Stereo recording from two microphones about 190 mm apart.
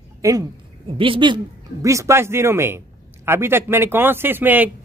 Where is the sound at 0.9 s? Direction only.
25° right (ahead or behind).